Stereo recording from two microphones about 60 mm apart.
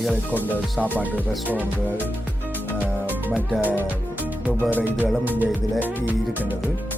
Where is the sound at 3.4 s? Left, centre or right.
Right.